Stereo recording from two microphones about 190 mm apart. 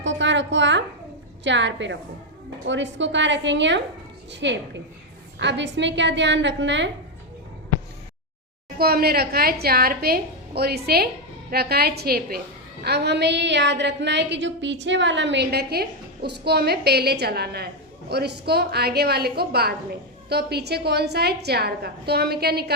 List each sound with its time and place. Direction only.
0.0 s music: 70° right (ahead or behind)
1.5 s a woman's voice: 70° right (ahead or behind)
8.8 s a woman's voice: 55° right (ahead or behind)